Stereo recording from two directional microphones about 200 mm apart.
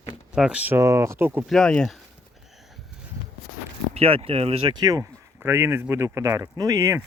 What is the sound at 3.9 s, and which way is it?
Speech, 30° right (ahead or behind).